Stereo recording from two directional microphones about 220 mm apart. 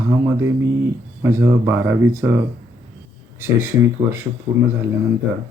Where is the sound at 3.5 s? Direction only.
10° right (ahead or behind).